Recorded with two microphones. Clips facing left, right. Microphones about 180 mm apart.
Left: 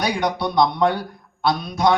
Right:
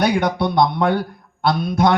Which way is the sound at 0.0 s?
55° right (ahead or behind).